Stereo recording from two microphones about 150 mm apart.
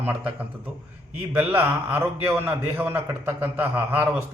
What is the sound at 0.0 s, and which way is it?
A man's voice, 10° right (ahead or behind).